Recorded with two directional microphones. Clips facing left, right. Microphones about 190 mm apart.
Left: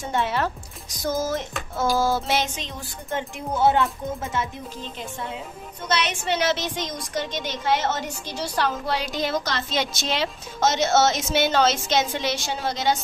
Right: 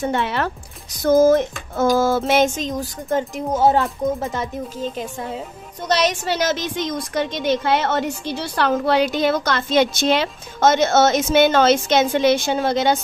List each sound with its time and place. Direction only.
0.0 s speech: 65° right (ahead or behind)
1.0 s a woman's voice: 55° right (ahead or behind)
1.9 s music: 55° right (ahead or behind); by 4.5 s 35° right (ahead or behind)
5.9 s a woman's voice: 35° right (ahead or behind); by 13.0 s 55° right (ahead or behind)